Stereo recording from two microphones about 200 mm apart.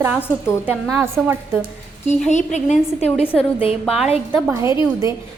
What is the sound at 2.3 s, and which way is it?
A woman's voice, 35° left (ahead or behind).